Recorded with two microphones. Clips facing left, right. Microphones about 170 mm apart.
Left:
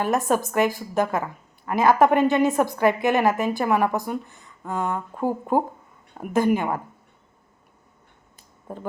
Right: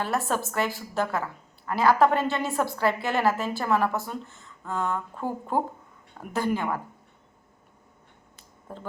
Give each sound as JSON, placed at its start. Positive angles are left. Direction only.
{"t": 0.0, "sound": "a woman's voice", "side_deg": 15}
{"t": 8.7, "sound": "a woman's voice", "side_deg": 15}